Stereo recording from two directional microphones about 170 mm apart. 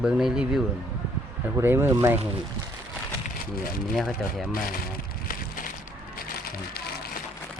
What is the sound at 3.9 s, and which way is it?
Speech, centre (ahead or behind).